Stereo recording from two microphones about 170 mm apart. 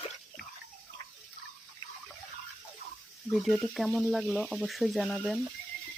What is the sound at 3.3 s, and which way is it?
Speech, centre (ahead or behind).